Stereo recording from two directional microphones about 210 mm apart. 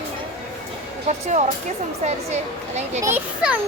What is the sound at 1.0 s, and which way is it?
Speech, 35° right (ahead or behind).